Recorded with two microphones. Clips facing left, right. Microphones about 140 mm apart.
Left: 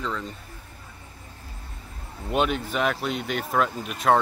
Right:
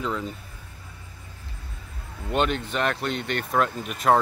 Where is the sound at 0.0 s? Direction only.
5° right (ahead or behind).